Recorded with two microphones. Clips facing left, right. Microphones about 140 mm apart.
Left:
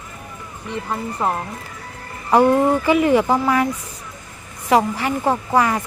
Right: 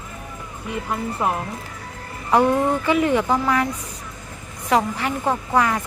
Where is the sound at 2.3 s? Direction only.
Centre (ahead or behind).